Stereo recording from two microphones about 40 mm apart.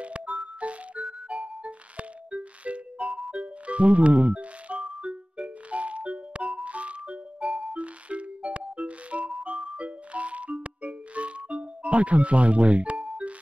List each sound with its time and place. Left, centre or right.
0.0 s music: right
3.0 s music: centre
3.3 s music: right
7.4 s music: centre
7.7 s music: right